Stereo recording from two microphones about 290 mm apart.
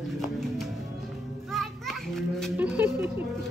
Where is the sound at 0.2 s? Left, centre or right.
Centre.